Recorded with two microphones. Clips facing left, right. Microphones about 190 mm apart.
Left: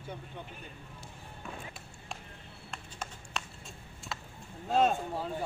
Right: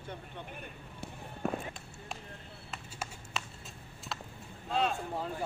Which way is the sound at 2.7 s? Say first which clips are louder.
Even; 5° right (ahead or behind).